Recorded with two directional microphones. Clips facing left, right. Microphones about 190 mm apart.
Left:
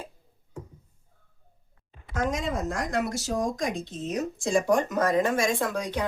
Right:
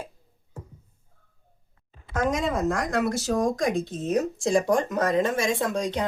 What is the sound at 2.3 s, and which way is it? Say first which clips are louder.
Speech: right 4 dB; 55° right (ahead or behind).